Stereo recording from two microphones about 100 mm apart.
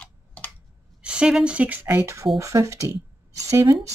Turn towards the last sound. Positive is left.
turn(degrees=-30)  # may be behind; listen again after turning